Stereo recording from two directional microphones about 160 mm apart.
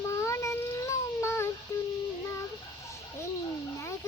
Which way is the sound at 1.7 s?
20° left (ahead or behind).